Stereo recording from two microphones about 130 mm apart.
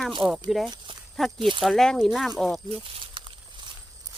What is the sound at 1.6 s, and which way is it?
Speech, centre (ahead or behind).